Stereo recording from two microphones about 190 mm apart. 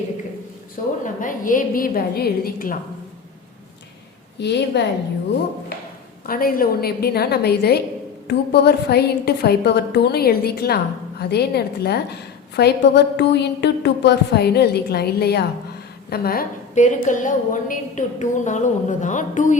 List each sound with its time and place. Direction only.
1.0 s a woman's voice: 45° left (ahead or behind)
4.4 s a woman's voice: 65° left (ahead or behind)
6.2 s a woman's voice: 50° left (ahead or behind)